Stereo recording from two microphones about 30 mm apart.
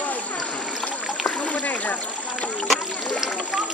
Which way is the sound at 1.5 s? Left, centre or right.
Left.